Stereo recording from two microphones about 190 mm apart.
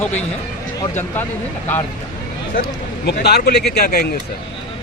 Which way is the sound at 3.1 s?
55° left (ahead or behind).